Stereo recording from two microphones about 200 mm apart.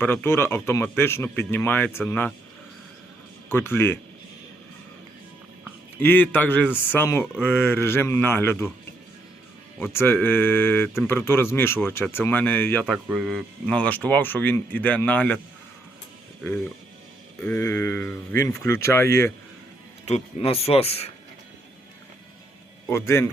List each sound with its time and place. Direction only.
0.0 s speech: 10° left (ahead or behind)
3.5 s speech: 10° left (ahead or behind)
6.0 s speech: 10° left (ahead or behind)
9.7 s speech: 10° left (ahead or behind)
13.1 s speech: 5° right (ahead or behind)
17.4 s speech: 10° left (ahead or behind)
20.1 s speech: 30° left (ahead or behind)
22.9 s speech: 15° left (ahead or behind)